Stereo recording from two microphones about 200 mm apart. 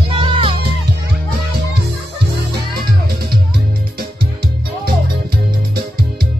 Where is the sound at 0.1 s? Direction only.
25° right (ahead or behind).